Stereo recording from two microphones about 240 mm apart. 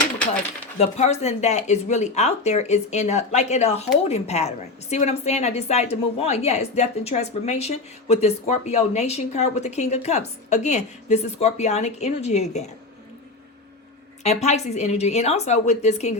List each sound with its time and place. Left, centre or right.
0.8 s a woman's voice: left
14.3 s a woman's voice: left